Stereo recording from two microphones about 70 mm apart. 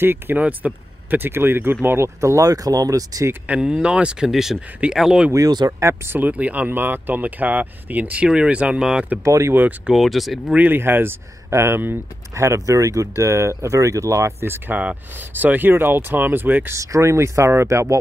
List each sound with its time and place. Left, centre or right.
0.0 s speech: right
2.1 s speech: right
2.5 s speech: right
3.4 s speech: centre
4.6 s speech: centre
4.9 s speech: centre
5.7 s speech: right
6.1 s speech: right
9.2 s speech: right
9.8 s speech: centre
10.5 s speech: right
10.8 s speech: right
12.4 s speech: right
16.7 s speech: right